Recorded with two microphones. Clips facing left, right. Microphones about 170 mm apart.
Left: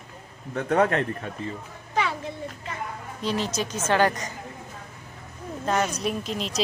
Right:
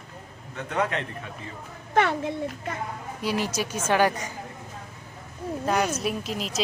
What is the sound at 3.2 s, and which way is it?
A woman's voice, 10° right (ahead or behind).